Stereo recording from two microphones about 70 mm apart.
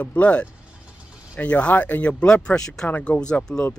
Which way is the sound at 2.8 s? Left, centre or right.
Left.